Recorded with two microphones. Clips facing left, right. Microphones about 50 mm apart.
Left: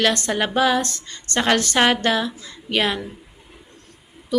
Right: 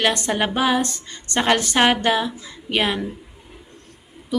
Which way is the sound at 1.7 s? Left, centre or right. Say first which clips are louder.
Right 1 dB; centre.